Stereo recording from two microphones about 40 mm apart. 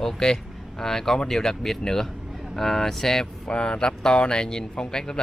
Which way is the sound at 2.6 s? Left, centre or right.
Centre.